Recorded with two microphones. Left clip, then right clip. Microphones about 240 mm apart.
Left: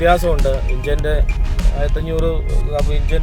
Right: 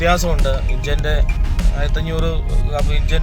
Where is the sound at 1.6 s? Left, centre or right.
Centre.